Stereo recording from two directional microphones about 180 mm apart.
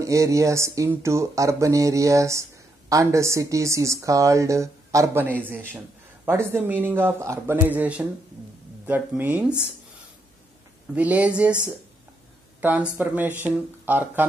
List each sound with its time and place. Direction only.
0.0 s speech: 15° right (ahead or behind)
11.0 s speech: 5° right (ahead or behind)
12.5 s speech: 10° right (ahead or behind)